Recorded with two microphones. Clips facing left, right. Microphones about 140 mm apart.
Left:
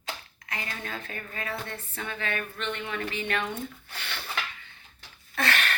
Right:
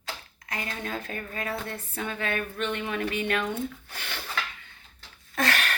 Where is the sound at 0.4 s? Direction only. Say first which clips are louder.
Right 3 dB; 35° right (ahead or behind).